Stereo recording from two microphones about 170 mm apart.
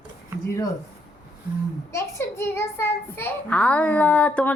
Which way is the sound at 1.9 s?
15° left (ahead or behind).